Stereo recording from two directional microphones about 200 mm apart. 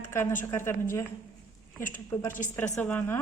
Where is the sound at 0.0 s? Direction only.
10° left (ahead or behind).